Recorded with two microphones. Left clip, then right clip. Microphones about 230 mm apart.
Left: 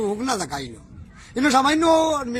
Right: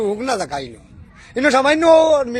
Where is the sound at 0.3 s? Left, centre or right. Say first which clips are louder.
Right 5 dB; left.